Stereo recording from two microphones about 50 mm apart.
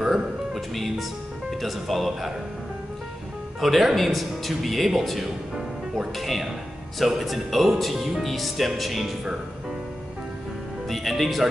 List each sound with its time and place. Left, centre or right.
0.0 s music: centre
0.7 s speech: centre
3.6 s speech: centre
10.9 s music: centre